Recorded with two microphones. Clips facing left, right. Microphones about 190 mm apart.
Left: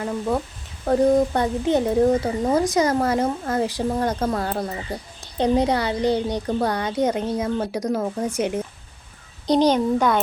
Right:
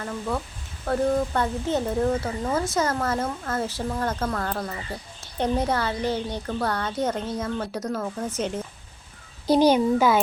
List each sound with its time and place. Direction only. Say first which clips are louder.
0.0 s a woman's voice: left 5 dB; 20° left (ahead or behind)
9.5 s a child's voice: even; 10° right (ahead or behind)